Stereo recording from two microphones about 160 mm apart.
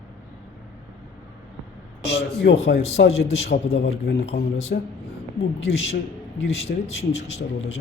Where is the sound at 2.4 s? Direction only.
90° left.